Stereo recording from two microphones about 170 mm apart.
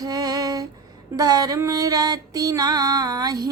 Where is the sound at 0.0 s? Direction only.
20° right (ahead or behind).